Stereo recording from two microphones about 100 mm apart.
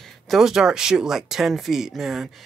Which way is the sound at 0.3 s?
5° right (ahead or behind).